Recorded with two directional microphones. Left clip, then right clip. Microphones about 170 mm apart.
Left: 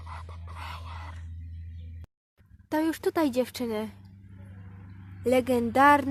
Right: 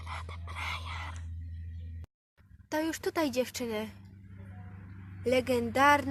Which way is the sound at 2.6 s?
35° left (ahead or behind).